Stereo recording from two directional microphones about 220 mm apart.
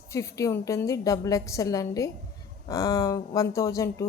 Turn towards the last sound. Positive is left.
turn(degrees=15)  # may be behind; listen again after turning